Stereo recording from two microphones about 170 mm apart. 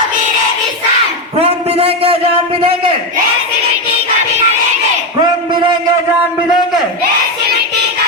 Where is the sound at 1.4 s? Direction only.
35° right (ahead or behind).